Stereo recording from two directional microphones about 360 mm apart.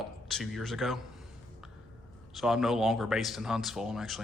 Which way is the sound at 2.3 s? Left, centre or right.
Centre.